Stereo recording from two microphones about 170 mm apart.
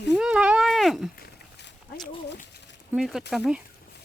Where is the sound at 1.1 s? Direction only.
75° left (ahead or behind).